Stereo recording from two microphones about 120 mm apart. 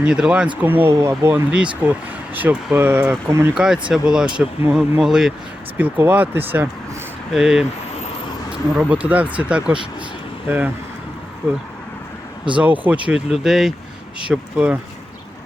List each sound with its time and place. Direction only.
0.0 s speech: 10° right (ahead or behind)
3.2 s speech: 25° right (ahead or behind)
3.5 s speech: 5° right (ahead or behind)
5.7 s speech: 15° right (ahead or behind)
8.8 s speech: 15° right (ahead or behind)
12.5 s speech: 15° right (ahead or behind)